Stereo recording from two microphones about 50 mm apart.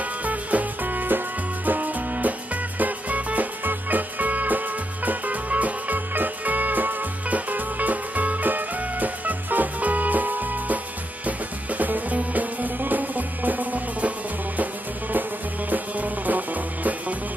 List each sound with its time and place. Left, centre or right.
0.0 s music: right
15.7 s music: right